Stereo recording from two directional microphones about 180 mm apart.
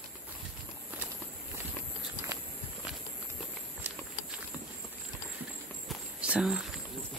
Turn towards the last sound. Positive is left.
turn(degrees=-5)  # may be behind; listen again after turning